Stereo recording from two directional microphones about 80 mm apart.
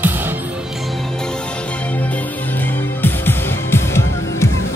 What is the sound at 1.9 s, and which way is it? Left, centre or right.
Music, left.